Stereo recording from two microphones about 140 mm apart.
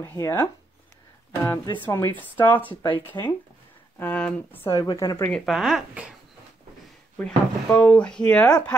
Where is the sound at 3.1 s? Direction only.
30° left (ahead or behind).